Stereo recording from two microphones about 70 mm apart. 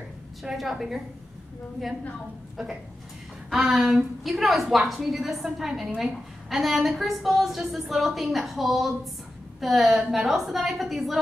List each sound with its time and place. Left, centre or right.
0.4 s a woman's voice: centre
2.5 s a woman's voice: centre